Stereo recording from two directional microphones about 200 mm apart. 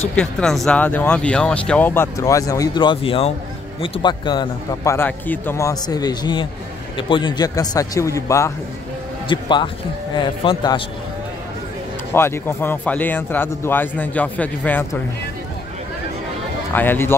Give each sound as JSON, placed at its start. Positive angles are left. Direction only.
{"t": 0.1, "sound": "a man's voice", "side_deg": 5}
{"t": 12.1, "sound": "speech", "side_deg": 10}
{"t": 16.7, "sound": "speech", "side_deg": 10}